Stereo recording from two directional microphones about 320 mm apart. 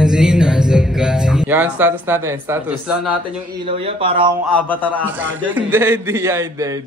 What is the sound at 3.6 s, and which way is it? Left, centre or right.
Speech, centre.